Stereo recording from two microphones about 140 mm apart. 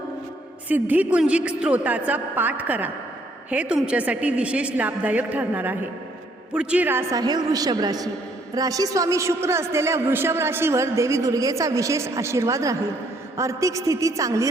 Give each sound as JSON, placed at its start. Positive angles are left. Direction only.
{"t": 0.7, "sound": "a woman's voice", "side_deg": -10}
{"t": 7.2, "sound": "a man's voice", "side_deg": -25}